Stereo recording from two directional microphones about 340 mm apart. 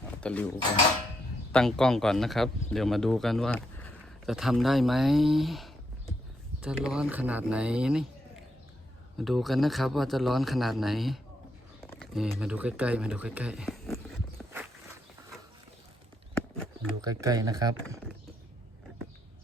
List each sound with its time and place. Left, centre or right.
0.2 s speech: centre
1.5 s speech: centre
9.1 s speech: centre
11.9 s a sound: centre
17.0 s speech: centre